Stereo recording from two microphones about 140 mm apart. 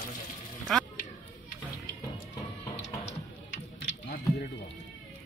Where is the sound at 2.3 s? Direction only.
25° left (ahead or behind).